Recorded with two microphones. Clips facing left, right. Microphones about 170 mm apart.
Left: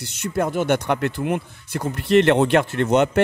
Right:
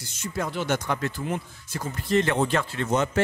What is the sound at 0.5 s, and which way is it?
Speech, 55° left (ahead or behind).